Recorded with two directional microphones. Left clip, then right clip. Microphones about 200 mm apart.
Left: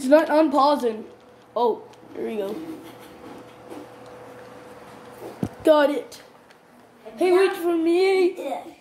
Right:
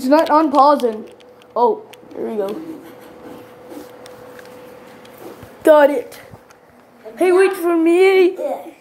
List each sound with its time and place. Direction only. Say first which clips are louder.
0.0 s speech: right 4 dB; 5° right (ahead or behind)
5.6 s a woman's voice: right 7 dB; 15° right (ahead or behind)
7.2 s speech: right 5 dB; 20° right (ahead or behind)